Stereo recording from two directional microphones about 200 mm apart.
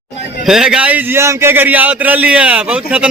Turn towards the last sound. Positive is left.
turn(degrees=-5)  # may be behind; listen again after turning